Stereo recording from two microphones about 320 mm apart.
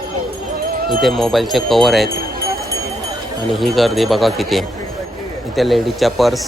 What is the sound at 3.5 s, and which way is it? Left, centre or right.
Speech, centre.